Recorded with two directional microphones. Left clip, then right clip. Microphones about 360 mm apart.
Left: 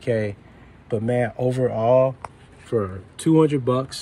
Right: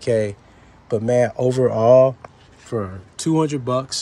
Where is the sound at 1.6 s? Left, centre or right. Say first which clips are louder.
Right 5 dB; right.